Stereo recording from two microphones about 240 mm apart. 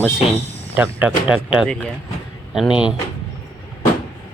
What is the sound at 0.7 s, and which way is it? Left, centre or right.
Speech, centre.